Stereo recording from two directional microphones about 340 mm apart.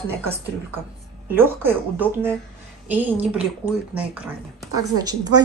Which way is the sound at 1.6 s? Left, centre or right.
Centre.